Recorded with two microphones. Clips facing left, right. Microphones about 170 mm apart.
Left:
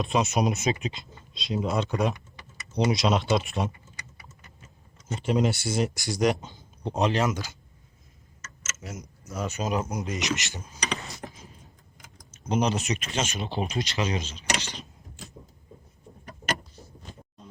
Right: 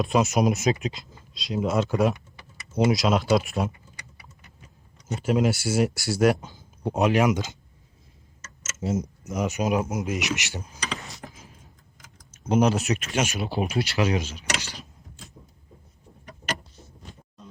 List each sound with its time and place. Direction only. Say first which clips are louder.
0.0 s speech: right 3 dB; centre (ahead or behind)
4.6 s a sound: right 1 dB; 15° right (ahead or behind)
5.1 s speech: right 2 dB; 5° right (ahead or behind)
8.8 s a sound: right 14 dB; 25° right (ahead or behind)
9.3 s speech: right 4 dB; 15° right (ahead or behind)
10.2 s speech: even; 15° right (ahead or behind)
12.3 s speech: right 4 dB; 10° right (ahead or behind)
13.7 s speech: right 6 dB; 20° left (ahead or behind)